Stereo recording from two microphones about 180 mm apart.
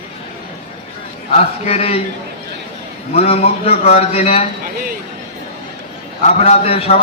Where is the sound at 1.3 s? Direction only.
35° left (ahead or behind).